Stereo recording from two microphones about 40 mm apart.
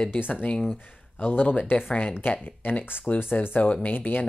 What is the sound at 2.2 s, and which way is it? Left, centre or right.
Speech, left.